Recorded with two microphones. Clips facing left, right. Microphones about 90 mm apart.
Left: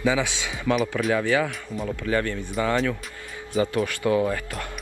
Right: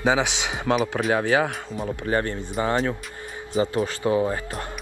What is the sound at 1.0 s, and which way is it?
Speech, 45° right (ahead or behind).